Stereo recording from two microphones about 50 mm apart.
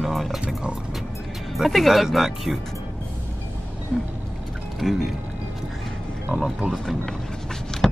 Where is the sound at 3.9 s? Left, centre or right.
Right.